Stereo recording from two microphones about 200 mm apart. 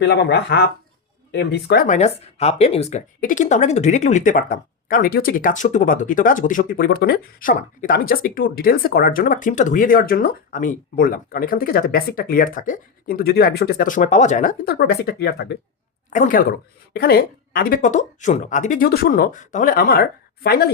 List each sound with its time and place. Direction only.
0.0 s speech: 55° left (ahead or behind)
16.0 s speech: 40° left (ahead or behind)
16.5 s speech: 50° left (ahead or behind)